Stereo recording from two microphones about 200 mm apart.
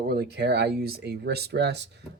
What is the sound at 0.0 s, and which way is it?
Speech, 50° right (ahead or behind).